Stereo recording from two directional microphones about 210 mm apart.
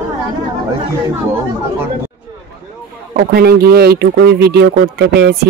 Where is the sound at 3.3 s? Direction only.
50° right (ahead or behind).